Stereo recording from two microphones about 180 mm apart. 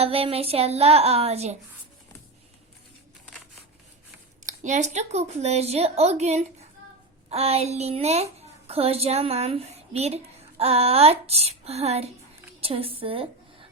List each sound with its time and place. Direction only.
0.0 s speech: 35° right (ahead or behind)
4.4 s a child's voice: 40° right (ahead or behind)